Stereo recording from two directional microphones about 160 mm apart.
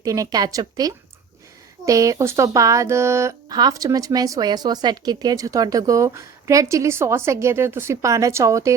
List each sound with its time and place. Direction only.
0.0 s speech: 20° right (ahead or behind)